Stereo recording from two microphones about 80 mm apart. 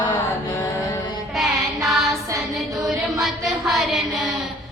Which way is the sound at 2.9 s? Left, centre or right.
Centre.